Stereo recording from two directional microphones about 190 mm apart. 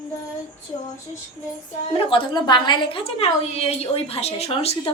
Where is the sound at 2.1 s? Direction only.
25° left (ahead or behind).